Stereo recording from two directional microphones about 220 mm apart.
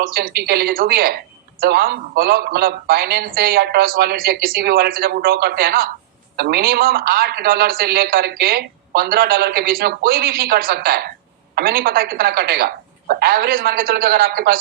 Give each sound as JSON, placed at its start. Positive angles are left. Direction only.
{"t": 0.0, "sound": "a man's voice", "side_deg": -45}